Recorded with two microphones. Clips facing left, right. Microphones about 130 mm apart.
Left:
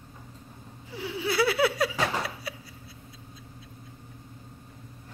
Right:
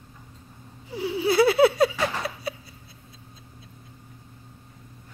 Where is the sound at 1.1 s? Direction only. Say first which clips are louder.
Right 6 dB; 25° right (ahead or behind).